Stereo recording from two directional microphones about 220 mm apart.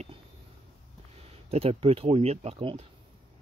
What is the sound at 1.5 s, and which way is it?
Speech, 25° right (ahead or behind).